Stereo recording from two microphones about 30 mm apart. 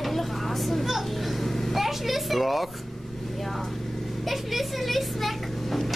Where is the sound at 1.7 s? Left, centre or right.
Centre.